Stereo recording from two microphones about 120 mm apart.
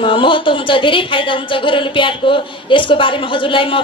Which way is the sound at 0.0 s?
45° left (ahead or behind).